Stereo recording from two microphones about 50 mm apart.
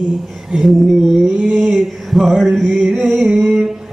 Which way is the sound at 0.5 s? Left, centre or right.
Centre.